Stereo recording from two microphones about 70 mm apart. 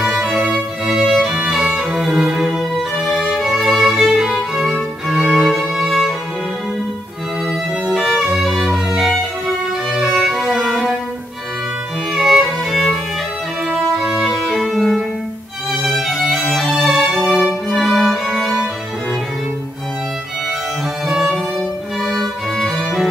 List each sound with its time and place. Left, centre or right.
0.1 s music: centre
7.8 s violin: centre
12.1 s music: centre
21.5 s music: centre